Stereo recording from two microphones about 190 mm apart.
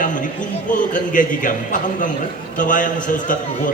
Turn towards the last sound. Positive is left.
turn(degrees=45)  # may be behind; listen again after turning